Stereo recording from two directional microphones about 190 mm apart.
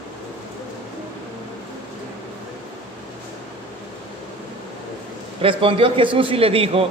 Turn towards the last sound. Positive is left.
turn(degrees=-30)  # may be behind; listen again after turning